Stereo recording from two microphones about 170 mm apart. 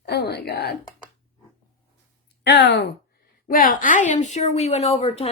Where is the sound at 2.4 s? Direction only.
90° left.